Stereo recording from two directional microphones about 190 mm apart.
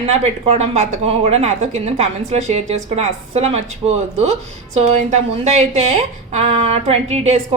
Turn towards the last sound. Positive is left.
turn(degrees=-35)  # may be behind; listen again after turning